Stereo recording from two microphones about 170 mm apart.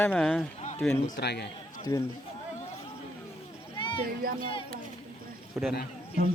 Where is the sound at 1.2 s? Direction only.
75° left (ahead or behind).